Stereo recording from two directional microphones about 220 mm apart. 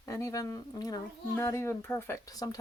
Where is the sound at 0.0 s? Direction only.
15° left (ahead or behind).